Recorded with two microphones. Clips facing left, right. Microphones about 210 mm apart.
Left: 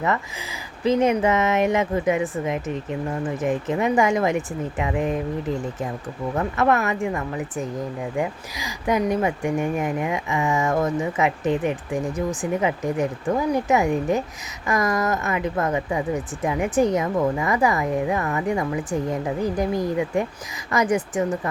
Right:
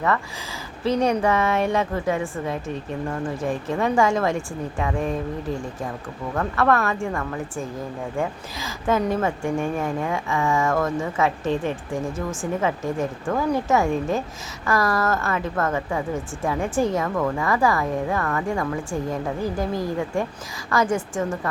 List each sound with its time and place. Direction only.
0.9 s a woman's voice: 20° left (ahead or behind)
6.3 s a woman's voice: 20° left (ahead or behind)